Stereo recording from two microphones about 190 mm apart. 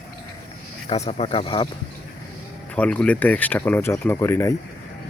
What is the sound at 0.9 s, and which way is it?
Speech, 35° left (ahead or behind).